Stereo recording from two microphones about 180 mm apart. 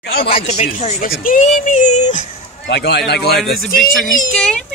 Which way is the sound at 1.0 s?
50° left (ahead or behind).